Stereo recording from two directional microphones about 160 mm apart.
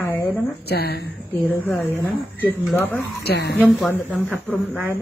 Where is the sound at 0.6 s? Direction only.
80° left.